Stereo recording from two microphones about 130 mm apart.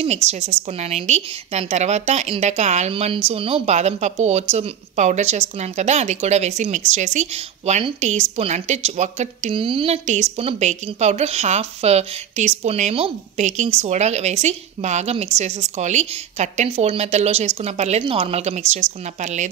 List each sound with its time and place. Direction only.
0.0 s speech: 55° right (ahead or behind)
2.9 s speech: 50° right (ahead or behind)
9.6 s a woman's voice: 45° right (ahead or behind)
10.0 s speech: 60° right (ahead or behind)
13.4 s speech: 65° right (ahead or behind)